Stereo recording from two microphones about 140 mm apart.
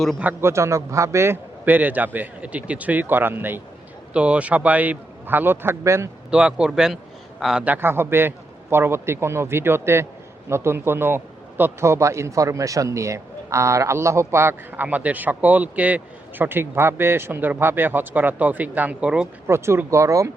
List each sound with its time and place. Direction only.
0.2 s a man's voice: 15° right (ahead or behind)
6.3 s a man's voice: 5° right (ahead or behind)
19.5 s a man's voice: 20° right (ahead or behind)